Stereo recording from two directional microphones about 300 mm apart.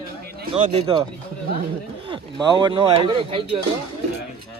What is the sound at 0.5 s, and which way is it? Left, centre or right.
Speech, centre.